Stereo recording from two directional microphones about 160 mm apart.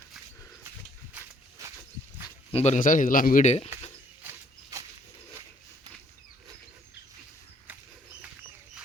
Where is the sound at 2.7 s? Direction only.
55° left (ahead or behind).